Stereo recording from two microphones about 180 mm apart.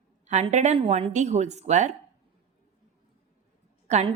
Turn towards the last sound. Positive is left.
turn(degrees=-40)  # may be behind; listen again after turning